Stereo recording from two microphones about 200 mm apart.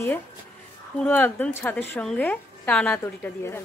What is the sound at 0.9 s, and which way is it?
A woman's voice, 10° left (ahead or behind).